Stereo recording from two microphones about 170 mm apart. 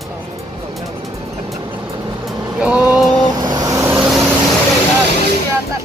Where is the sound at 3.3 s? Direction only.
25° right (ahead or behind).